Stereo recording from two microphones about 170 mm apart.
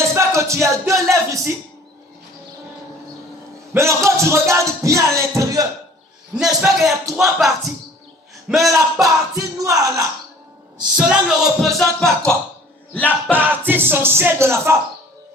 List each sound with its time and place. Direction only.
0.0 s music: 15° right (ahead or behind)
1.1 s a sound: 20° right (ahead or behind)
3.8 s music: 15° right (ahead or behind)
6.6 s music: centre (ahead or behind)
8.7 s speech: 20° right (ahead or behind)
10.9 s music: 5° right (ahead or behind)
13.3 s music: 10° right (ahead or behind)